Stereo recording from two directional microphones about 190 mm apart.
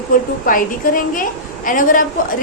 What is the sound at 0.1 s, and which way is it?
A woman's voice, 45° left (ahead or behind).